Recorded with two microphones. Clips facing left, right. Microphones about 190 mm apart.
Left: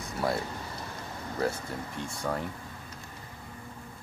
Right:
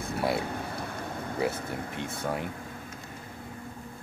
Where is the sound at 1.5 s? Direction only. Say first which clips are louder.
Right 2 dB; 60° right (ahead or behind).